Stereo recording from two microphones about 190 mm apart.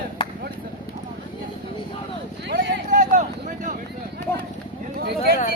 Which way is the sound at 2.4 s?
65° right (ahead or behind).